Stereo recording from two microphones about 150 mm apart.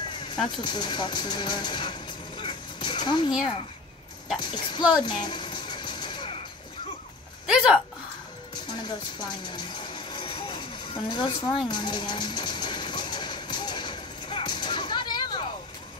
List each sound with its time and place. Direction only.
0.6 s speech: 30° left (ahead or behind)
2.4 s music: 30° left (ahead or behind)
4.4 s speech: 30° left (ahead or behind)
4.9 s music: 30° left (ahead or behind)
7.4 s a woman's voice: 5° right (ahead or behind)
8.8 s a sound: 30° left (ahead or behind)